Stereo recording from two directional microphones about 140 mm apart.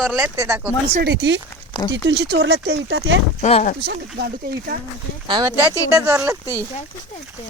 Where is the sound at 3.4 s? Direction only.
55° left (ahead or behind).